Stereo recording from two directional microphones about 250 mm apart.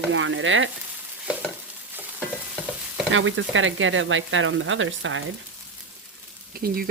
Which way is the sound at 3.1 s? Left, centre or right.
Right.